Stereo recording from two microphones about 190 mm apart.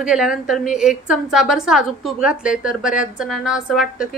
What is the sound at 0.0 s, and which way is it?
A woman's voice, 5° right (ahead or behind).